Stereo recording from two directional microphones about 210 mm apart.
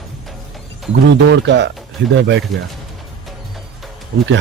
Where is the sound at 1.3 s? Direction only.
55° right (ahead or behind).